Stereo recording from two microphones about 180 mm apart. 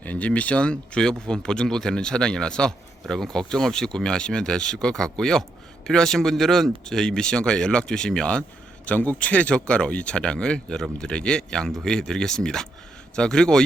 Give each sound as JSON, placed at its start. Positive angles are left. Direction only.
{"t": 0.0, "sound": "speech", "side_deg": 10}